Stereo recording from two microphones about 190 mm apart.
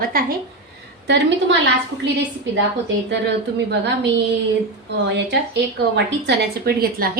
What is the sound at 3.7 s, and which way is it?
Speech, 65° right (ahead or behind).